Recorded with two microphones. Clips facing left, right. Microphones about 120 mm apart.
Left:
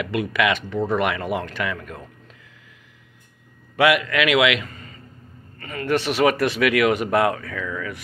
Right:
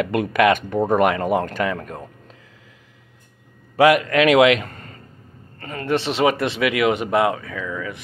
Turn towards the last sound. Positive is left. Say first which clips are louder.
# right 1 dB
turn(degrees=-15)  # may be behind; listen again after turning